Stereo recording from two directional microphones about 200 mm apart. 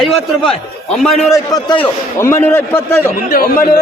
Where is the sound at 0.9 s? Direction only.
Centre (ahead or behind).